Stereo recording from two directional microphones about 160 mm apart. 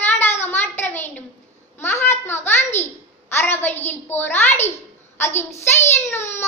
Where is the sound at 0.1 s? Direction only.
15° left (ahead or behind).